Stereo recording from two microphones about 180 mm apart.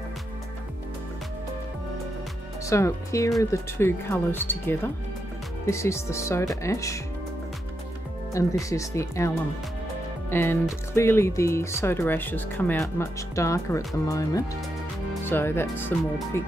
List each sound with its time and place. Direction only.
2.6 s speech: 15° left (ahead or behind)
8.3 s speech: 15° left (ahead or behind)
10.3 s speech: 10° left (ahead or behind)